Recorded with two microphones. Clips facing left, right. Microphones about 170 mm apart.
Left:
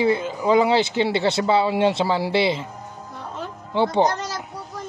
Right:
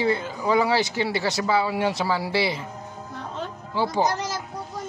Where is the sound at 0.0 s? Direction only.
20° left (ahead or behind).